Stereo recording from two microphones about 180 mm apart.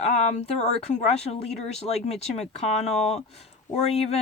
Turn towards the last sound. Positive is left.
turn(degrees=35)  # may be behind; listen again after turning